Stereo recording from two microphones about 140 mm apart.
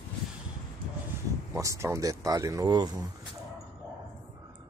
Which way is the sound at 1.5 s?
20° right (ahead or behind).